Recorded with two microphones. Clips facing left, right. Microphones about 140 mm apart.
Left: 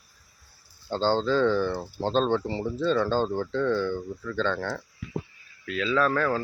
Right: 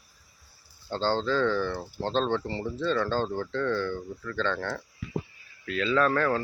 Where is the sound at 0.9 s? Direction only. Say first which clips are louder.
Left 3 dB; 5° left (ahead or behind).